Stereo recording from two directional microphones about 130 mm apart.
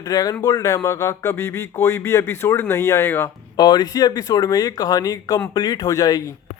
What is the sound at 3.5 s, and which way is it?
Speech, 30° left (ahead or behind).